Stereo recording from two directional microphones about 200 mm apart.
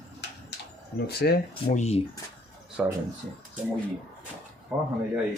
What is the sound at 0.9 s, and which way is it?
Speech, 50° left (ahead or behind).